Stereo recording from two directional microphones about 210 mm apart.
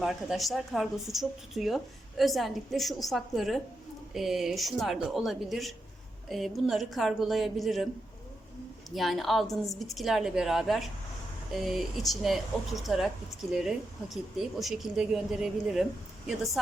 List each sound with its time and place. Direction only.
0.0 s speech: centre (ahead or behind)
9.0 s speech: centre (ahead or behind)